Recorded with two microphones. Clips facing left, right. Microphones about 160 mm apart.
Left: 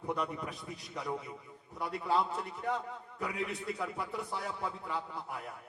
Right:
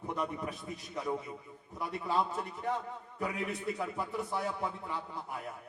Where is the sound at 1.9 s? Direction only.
20° right (ahead or behind).